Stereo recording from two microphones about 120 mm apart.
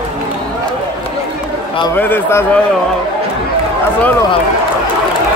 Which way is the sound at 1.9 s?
15° left (ahead or behind).